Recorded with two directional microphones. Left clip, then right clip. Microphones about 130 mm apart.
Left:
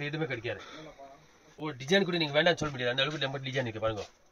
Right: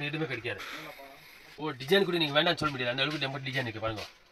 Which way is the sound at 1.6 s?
20° left (ahead or behind).